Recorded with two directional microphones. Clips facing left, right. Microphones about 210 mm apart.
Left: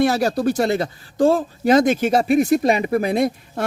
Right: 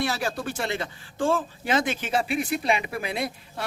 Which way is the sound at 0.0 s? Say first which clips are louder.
Left 10 dB; 40° left (ahead or behind).